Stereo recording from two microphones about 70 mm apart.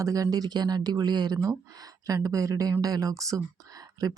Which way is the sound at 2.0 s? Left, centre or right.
Right.